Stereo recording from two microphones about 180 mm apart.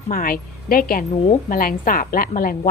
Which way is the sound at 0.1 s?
50° left (ahead or behind).